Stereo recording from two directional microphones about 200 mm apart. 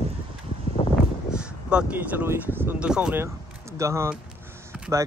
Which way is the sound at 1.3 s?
5° right (ahead or behind).